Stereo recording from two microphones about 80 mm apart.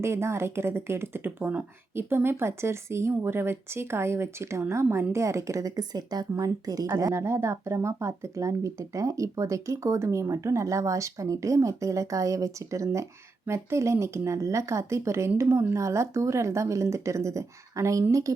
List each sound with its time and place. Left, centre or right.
0.0 s speech: right